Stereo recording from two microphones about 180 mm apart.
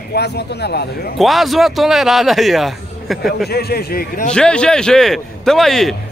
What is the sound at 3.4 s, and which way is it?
Speech, 60° left (ahead or behind).